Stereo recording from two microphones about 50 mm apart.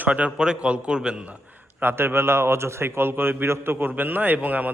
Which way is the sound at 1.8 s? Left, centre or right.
Right.